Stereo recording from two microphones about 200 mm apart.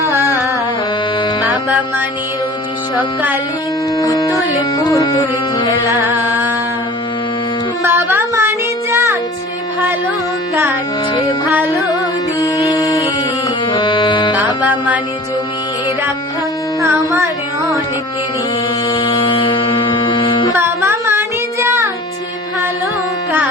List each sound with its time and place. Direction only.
0.0 s music: 15° right (ahead or behind)
3.0 s carnatic music: 10° right (ahead or behind)
3.9 s music: 15° left (ahead or behind)
5.9 s music: 10° right (ahead or behind)
7.9 s a sound: 10° right (ahead or behind)
10.5 s music: 10° right (ahead or behind)
12.4 s music: 15° left (ahead or behind)
14.6 s music: 10° right (ahead or behind)
16.8 s carnatic music: 15° right (ahead or behind)
18.9 s music: 20° left (ahead or behind)
20.6 s music: 10° right (ahead or behind)